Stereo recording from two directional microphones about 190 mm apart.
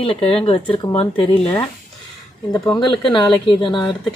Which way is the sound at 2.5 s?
25° left (ahead or behind).